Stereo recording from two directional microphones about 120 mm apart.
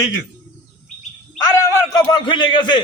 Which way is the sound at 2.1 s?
40° left (ahead or behind).